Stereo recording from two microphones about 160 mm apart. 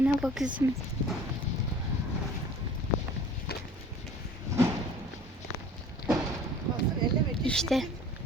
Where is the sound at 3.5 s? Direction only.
80° left.